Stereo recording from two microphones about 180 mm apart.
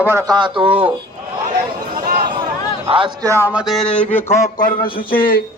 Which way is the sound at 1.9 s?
55° right (ahead or behind).